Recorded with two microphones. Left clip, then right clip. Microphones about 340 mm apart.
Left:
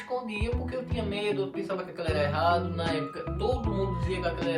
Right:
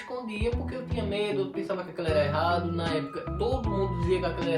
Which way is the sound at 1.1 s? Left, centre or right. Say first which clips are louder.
Right 2 dB; centre.